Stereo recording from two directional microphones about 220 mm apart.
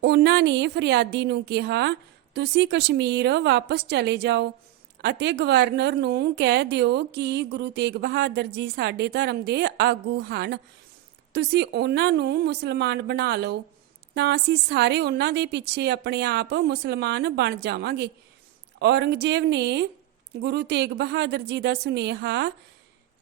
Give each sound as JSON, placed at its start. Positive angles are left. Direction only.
{"t": 0.0, "sound": "a woman's voice", "side_deg": -50}